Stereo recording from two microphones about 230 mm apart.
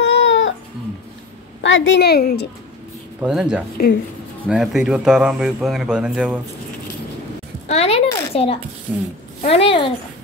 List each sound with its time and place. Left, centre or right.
0.0 s cat: left
1.6 s a woman's voice: left
3.2 s a man's voice: centre
7.6 s speech: left
8.9 s a woman's voice: centre
9.4 s speech: left